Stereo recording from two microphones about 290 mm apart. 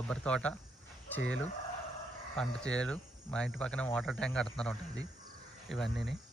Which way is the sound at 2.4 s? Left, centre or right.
Centre.